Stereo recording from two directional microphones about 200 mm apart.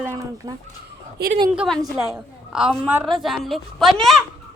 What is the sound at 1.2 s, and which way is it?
Speech, 55° right (ahead or behind).